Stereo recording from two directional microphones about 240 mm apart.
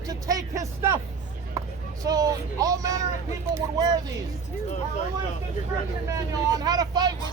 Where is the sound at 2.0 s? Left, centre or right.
Centre.